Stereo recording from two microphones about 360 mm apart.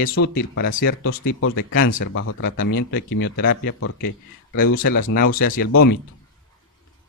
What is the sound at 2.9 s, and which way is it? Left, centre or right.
Speech, left.